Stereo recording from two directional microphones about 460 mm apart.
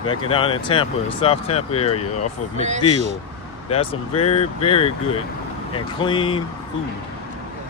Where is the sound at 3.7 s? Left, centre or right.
Centre.